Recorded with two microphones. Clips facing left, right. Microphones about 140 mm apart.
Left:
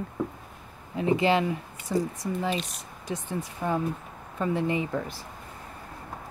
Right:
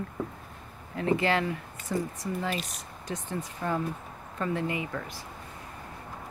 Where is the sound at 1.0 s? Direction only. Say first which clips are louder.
Left 3 dB; 20° left (ahead or behind).